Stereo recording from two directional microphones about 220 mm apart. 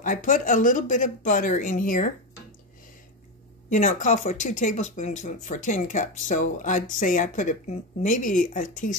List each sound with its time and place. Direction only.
0.0 s speech: 35° left (ahead or behind)
3.7 s speech: 35° left (ahead or behind)